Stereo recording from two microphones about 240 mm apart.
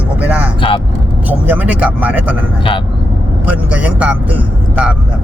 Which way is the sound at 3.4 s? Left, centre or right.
Centre.